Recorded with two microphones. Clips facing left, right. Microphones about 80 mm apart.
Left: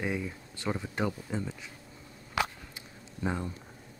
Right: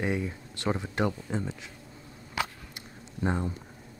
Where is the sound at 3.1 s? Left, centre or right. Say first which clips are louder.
Right 4 dB; centre.